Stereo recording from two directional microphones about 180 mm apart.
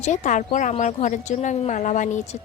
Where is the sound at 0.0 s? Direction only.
45° left (ahead or behind).